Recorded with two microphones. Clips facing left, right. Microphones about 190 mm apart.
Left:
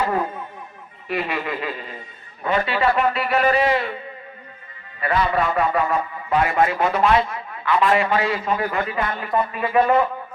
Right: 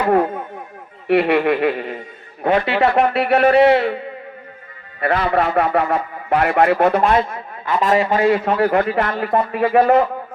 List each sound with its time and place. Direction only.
0.0 s a man's voice: 60° right (ahead or behind); by 8.0 s 40° right (ahead or behind)
8.1 s a man's voice: 55° right (ahead or behind); by 10.1 s 75° right (ahead or behind)